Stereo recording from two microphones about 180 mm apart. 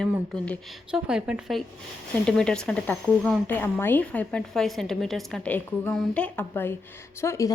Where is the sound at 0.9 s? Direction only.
5° right (ahead or behind).